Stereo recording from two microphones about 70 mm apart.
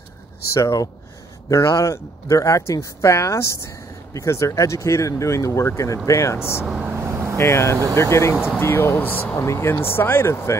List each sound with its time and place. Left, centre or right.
0.6 s speech: left
6.8 s speech: right
7.1 s vehicle: right
7.3 s speech: left
9.4 s speech: left